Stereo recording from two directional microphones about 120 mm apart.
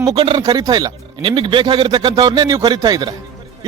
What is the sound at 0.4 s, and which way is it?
Speech, 35° right (ahead or behind).